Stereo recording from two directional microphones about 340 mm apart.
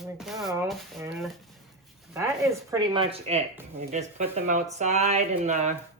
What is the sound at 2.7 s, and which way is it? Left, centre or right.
Speech, centre.